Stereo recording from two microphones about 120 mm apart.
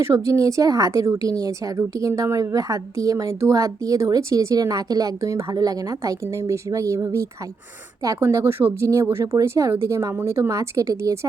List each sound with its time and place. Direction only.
0.0 s a woman's voice: 25° right (ahead or behind)